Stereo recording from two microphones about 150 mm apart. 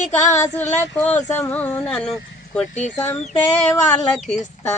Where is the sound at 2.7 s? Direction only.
50° left (ahead or behind).